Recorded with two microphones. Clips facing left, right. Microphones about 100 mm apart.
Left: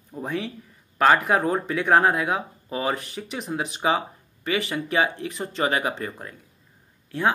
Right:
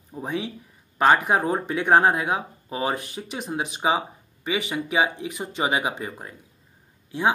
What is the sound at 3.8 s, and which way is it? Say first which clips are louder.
Speech: even; 10° right (ahead or behind).